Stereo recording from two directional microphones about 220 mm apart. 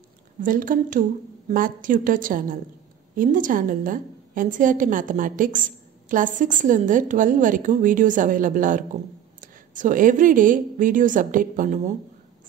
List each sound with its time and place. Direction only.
0.4 s a woman's voice: 40° right (ahead or behind)